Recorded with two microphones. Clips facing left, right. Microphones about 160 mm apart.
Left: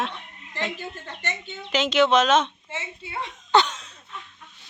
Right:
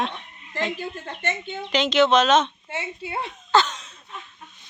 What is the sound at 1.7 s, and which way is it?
Speech, 10° left (ahead or behind).